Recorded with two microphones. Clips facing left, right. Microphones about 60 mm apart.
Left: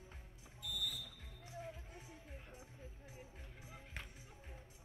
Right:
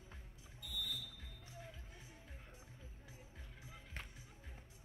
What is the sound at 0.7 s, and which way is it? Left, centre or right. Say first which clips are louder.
Music: left 1 dB; left.